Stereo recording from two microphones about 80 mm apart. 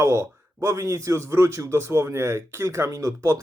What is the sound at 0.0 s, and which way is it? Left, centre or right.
Speech, right.